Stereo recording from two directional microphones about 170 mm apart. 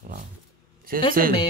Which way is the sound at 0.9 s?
60° right (ahead or behind).